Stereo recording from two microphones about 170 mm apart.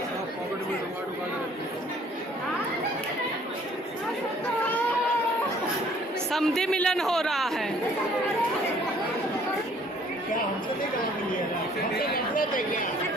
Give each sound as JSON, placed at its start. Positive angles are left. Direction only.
{"t": 6.3, "sound": "speech", "side_deg": 0}
{"t": 12.1, "sound": "speech", "side_deg": 55}